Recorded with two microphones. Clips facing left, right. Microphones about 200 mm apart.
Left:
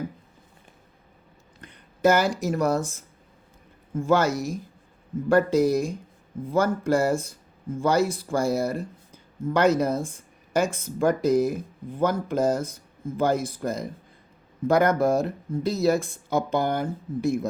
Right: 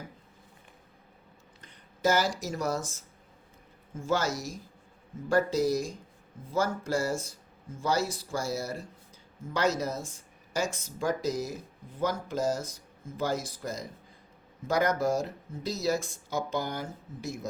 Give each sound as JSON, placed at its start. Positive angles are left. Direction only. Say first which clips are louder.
{"t": 1.6, "sound": "speech", "louder": "left 7 dB", "side_deg": 60}